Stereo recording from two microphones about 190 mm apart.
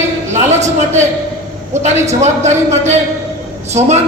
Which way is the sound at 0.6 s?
40° right (ahead or behind).